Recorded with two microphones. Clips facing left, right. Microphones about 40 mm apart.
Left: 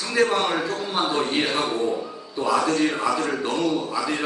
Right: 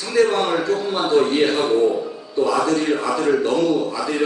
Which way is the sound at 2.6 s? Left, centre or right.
Centre.